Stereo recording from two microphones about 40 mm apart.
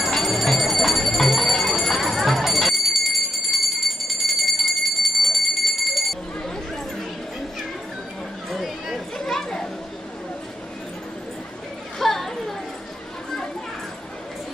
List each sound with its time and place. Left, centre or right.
0.0 s bell: centre
8.5 s chatter: centre
9.2 s chatter: centre
12.0 s chatter: centre